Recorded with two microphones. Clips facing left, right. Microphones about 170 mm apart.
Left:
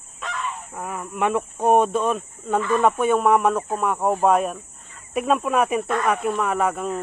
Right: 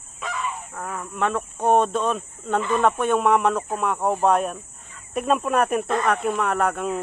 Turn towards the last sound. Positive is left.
turn(degrees=0)  # may be behind; listen again after turning